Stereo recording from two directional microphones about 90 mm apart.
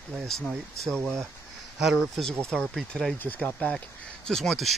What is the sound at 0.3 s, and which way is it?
Speech, 5° left (ahead or behind).